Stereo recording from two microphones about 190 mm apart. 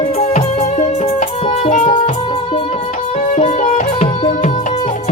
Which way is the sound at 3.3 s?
35° left (ahead or behind).